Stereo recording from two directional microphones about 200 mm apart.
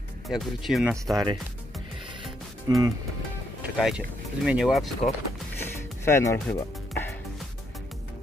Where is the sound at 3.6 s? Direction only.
5° right (ahead or behind).